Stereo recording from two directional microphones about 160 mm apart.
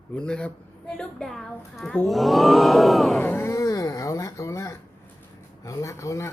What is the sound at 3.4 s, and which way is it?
Speech, 20° left (ahead or behind).